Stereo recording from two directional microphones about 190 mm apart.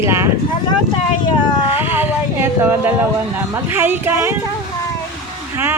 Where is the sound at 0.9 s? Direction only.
25° left (ahead or behind).